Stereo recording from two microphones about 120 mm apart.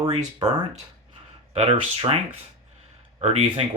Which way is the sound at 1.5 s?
55° right (ahead or behind).